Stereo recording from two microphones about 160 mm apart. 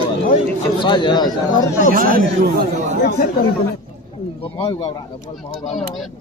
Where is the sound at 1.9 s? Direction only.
60° right (ahead or behind).